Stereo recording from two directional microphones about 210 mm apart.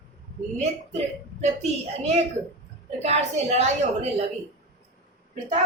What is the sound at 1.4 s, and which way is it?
Speech, 30° right (ahead or behind).